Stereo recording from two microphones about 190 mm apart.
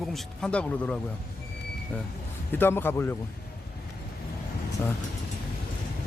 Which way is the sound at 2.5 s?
10° left (ahead or behind).